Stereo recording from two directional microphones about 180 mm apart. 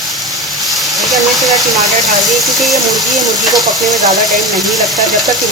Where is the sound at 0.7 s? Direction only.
Centre (ahead or behind).